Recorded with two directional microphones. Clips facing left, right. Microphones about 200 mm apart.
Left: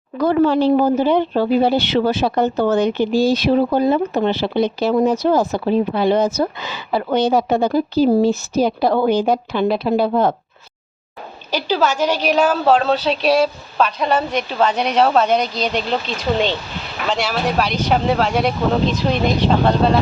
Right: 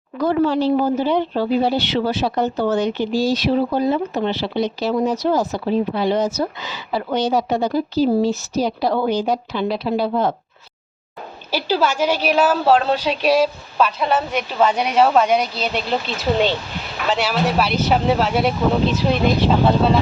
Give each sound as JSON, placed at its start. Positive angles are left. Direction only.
{"t": 0.2, "sound": "speech", "side_deg": 60}
{"t": 11.5, "sound": "a woman's voice", "side_deg": -10}
{"t": 17.1, "sound": "a woman's voice", "side_deg": -5}